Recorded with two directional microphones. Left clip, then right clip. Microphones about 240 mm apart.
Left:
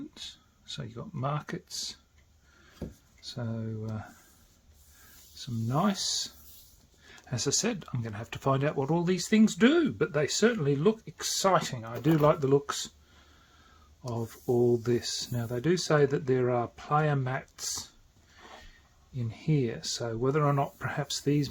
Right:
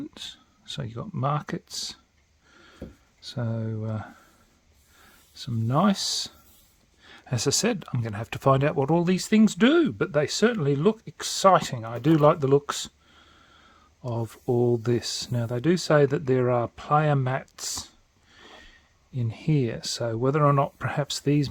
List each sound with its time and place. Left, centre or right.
0.1 s speech: right
2.8 s speech: centre
3.2 s speech: right
5.3 s speech: right
14.1 s speech: right
19.1 s speech: right